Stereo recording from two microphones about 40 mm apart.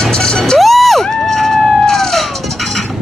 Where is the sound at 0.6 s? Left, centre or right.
Centre.